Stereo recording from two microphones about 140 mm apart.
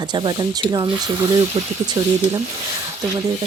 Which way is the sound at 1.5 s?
50° right (ahead or behind).